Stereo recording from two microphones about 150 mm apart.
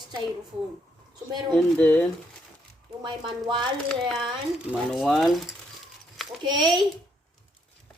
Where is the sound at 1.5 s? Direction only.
5° left (ahead or behind).